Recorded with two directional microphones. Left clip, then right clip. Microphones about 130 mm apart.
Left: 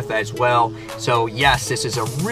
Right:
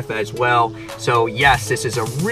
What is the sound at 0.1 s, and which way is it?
Speech, 35° left (ahead or behind).